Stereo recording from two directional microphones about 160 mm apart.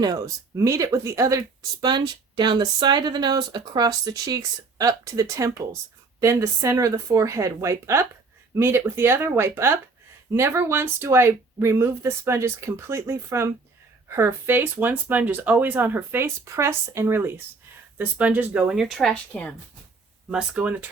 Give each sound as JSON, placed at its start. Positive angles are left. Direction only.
{"t": 0.0, "sound": "speech", "side_deg": -20}
{"t": 20.3, "sound": "speech", "side_deg": -5}